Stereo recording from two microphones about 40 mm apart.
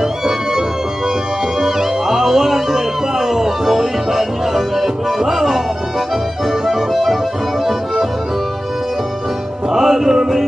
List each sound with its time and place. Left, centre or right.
0.0 s music: centre
6.6 s accordion: centre
9.7 s music: centre